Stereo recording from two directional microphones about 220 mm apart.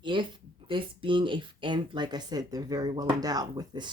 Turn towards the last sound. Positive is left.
turn(degrees=-20)  # may be behind; listen again after turning